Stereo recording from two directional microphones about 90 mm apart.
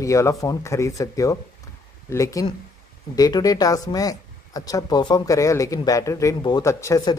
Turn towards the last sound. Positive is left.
turn(degrees=30)  # may be behind; listen again after turning